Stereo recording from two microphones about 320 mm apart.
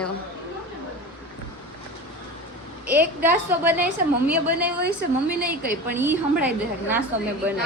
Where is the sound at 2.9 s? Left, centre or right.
Centre.